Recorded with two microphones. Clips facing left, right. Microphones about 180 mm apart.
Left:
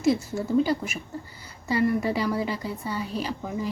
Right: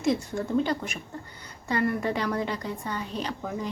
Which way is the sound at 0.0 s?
5° left (ahead or behind).